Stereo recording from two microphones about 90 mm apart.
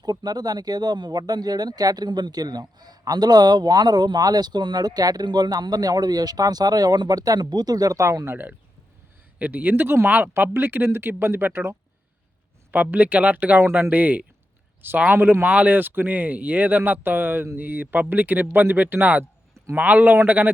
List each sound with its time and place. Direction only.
0.0 s speech: 50° right (ahead or behind); by 8.4 s 30° right (ahead or behind)
9.4 s speech: 20° right (ahead or behind)